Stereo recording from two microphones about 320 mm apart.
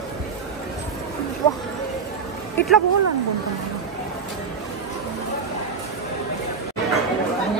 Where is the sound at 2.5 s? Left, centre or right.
Centre.